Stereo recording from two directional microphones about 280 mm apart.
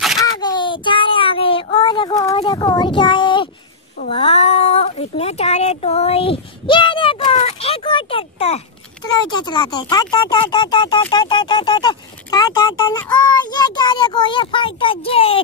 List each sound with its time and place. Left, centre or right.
0.2 s child singing: centre
4.0 s speech: left